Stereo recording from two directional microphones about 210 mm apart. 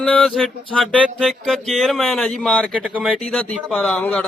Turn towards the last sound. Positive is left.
turn(degrees=5)  # may be behind; listen again after turning